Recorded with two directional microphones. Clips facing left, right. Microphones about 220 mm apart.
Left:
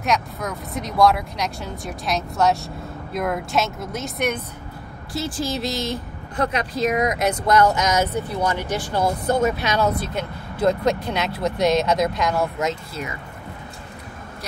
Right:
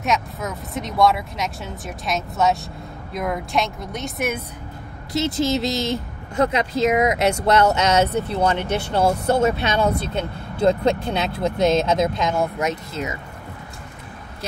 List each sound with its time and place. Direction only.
0.0 s speech: centre (ahead or behind)
5.1 s speech: 20° right (ahead or behind)